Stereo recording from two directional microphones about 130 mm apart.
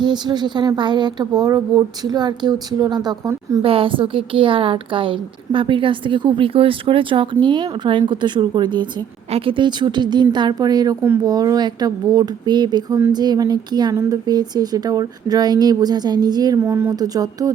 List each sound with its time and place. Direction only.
0.0 s a woman's voice: 35° right (ahead or behind)
3.6 s a woman's voice: 45° right (ahead or behind)
13.9 s speech: 20° right (ahead or behind)
14.3 s a woman's voice: 30° right (ahead or behind)
17.0 s a sound: 30° right (ahead or behind)